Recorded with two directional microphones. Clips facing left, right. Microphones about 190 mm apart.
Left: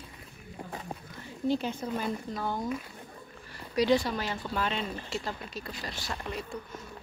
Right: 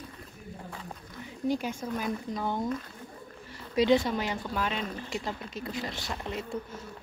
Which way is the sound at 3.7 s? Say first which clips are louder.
Right 2 dB; 20° right (ahead or behind).